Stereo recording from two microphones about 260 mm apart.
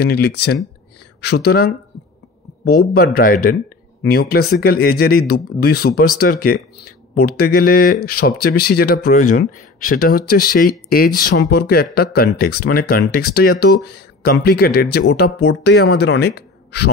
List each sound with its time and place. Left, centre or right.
0.0 s speech: left
2.9 s speech: left